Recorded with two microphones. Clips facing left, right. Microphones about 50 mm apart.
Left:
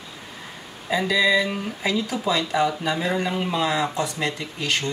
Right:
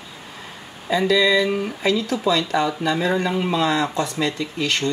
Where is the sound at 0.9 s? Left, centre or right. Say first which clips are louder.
Right 3 dB; centre.